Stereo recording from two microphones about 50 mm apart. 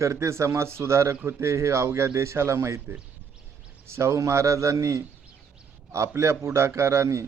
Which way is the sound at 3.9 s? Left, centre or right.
Right.